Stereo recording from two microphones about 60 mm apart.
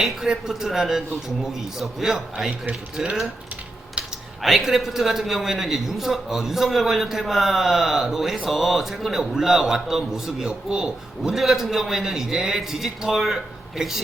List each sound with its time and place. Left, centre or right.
0.0 s a man's voice: centre
4.0 s typing: centre
4.4 s a man's voice: centre